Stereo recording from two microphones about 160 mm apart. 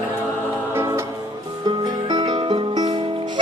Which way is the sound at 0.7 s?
15° right (ahead or behind).